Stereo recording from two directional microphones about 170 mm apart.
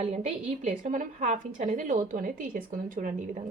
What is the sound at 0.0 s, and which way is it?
A woman's voice, 40° right (ahead or behind).